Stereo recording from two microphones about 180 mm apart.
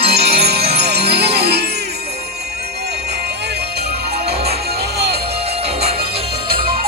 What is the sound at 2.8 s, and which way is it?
Music, 65° right (ahead or behind).